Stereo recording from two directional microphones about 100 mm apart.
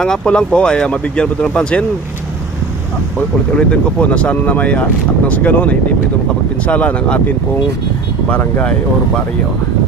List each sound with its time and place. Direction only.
0.0 s speech: 10° left (ahead or behind)
3.2 s speech: 10° left (ahead or behind)
6.7 s speech: 15° left (ahead or behind)